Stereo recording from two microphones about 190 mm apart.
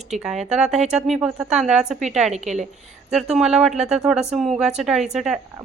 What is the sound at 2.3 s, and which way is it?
Speech, 35° right (ahead or behind).